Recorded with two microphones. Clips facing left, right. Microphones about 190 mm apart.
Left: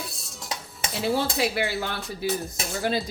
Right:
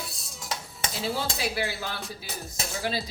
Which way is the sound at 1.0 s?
60° left (ahead or behind).